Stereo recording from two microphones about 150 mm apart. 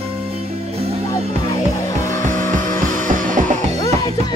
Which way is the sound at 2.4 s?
60° right (ahead or behind).